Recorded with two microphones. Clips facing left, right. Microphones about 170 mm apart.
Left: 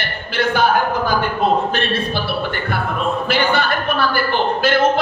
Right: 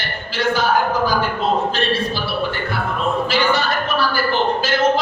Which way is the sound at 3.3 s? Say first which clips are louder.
Left 1 dB; 55° left (ahead or behind).